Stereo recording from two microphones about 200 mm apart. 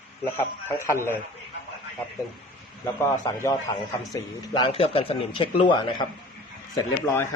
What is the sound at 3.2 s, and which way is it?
A man's voice, 15° left (ahead or behind).